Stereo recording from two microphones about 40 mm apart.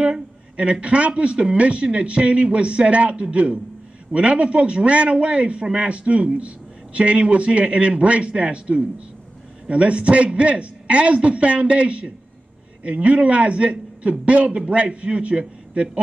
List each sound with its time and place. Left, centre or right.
0.0 s a man's voice: right